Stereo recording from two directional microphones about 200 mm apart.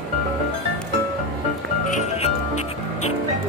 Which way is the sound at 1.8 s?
35° left (ahead or behind).